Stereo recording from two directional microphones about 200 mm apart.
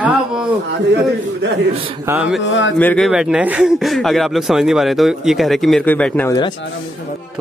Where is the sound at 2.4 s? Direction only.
65° left (ahead or behind).